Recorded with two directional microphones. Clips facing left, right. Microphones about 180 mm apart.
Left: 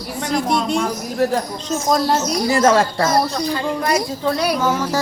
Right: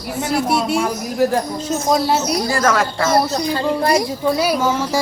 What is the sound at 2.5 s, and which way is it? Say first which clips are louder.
Speech: left 5 dB; 25° left (ahead or behind).